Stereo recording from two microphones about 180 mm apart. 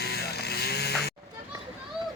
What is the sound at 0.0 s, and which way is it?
Vehicle, 65° left (ahead or behind).